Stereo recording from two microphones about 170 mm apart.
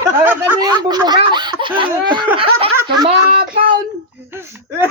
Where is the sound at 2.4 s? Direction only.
30° right (ahead or behind).